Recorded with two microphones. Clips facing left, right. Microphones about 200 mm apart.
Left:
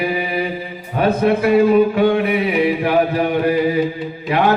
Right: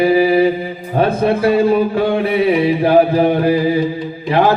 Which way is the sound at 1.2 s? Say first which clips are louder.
Left 1 dB; 30° right (ahead or behind).